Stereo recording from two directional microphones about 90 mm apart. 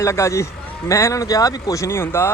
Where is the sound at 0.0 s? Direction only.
35° left (ahead or behind).